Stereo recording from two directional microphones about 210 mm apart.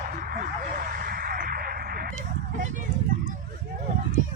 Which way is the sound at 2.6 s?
35° right (ahead or behind).